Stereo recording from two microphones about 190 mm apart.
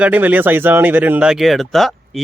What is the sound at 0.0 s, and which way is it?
A man's voice, 10° right (ahead or behind).